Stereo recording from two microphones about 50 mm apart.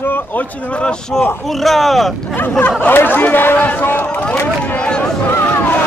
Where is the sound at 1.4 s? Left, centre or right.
Centre.